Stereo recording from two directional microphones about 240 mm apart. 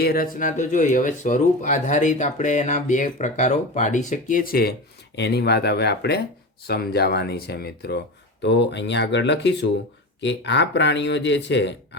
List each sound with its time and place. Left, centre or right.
0.0 s speech: left